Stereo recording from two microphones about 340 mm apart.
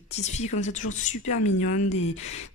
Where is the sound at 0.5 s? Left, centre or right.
Left.